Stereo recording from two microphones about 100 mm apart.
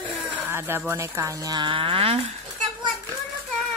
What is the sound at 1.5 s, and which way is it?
Music, 55° right (ahead or behind).